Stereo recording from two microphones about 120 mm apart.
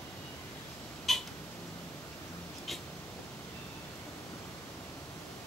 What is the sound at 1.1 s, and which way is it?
Cat, centre (ahead or behind).